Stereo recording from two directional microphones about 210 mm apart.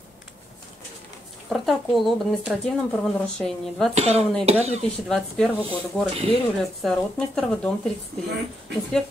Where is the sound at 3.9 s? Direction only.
30° right (ahead or behind).